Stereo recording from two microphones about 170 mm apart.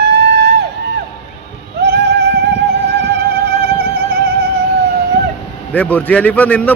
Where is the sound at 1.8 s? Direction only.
75° right (ahead or behind).